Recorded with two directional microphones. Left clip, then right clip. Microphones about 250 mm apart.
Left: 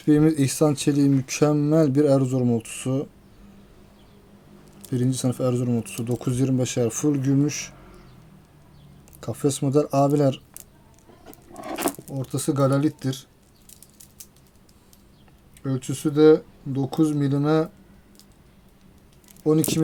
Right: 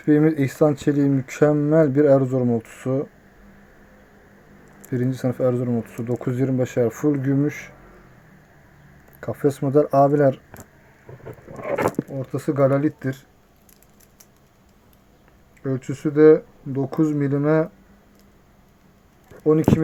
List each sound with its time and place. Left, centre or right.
0.0 s speech: left
4.9 s speech: centre
9.2 s speech: centre
12.0 s speech: centre
15.6 s speech: centre
19.5 s speech: left